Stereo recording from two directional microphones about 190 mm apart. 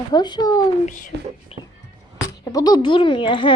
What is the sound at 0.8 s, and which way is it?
Speech, 45° left (ahead or behind).